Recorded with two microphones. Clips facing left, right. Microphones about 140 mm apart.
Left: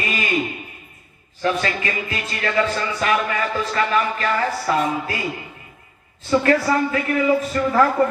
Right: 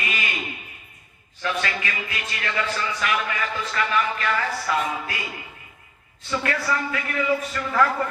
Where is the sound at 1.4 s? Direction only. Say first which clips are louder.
Left 5 dB; 35° left (ahead or behind).